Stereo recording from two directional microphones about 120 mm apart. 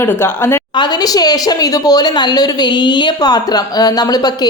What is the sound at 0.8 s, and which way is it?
A woman's voice, 30° left (ahead or behind).